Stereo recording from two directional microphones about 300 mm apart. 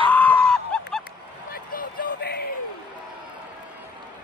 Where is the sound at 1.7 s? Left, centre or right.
Left.